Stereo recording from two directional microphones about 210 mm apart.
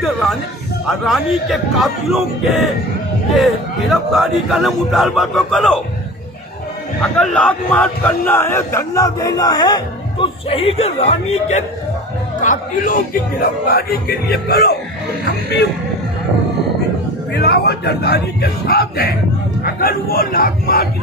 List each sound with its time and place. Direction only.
0.0 s a man's voice: centre (ahead or behind)
3.9 s a man's voice: centre (ahead or behind)
7.2 s a man's voice: 5° left (ahead or behind); by 14.8 s 50° left (ahead or behind)
17.3 s a man's voice: 50° left (ahead or behind)